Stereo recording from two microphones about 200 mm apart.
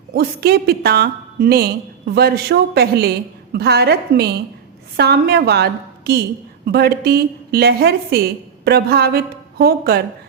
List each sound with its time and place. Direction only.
0.2 s a woman's voice: 50° right (ahead or behind)